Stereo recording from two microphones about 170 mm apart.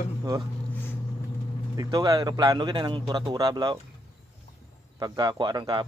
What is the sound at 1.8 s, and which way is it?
Speech, 20° right (ahead or behind).